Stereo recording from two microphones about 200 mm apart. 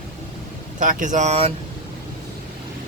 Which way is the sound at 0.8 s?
40° right (ahead or behind).